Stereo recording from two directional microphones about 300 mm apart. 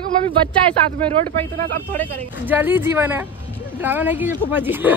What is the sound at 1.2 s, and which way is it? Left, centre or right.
Speech, right.